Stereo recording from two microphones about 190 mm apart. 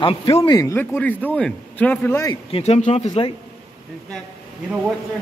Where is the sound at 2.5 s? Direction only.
30° left (ahead or behind).